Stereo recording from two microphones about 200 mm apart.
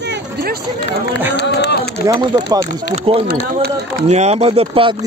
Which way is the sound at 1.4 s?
55° left (ahead or behind).